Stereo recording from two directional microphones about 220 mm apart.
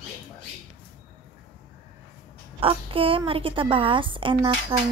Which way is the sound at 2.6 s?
25° right (ahead or behind).